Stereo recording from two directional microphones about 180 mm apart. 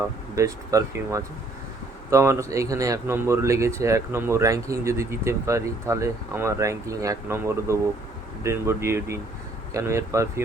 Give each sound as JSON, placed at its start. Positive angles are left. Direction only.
{"t": 0.3, "sound": "speech", "side_deg": -15}